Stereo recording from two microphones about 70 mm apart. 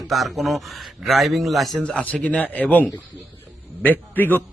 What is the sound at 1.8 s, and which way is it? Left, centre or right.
A man's voice, centre.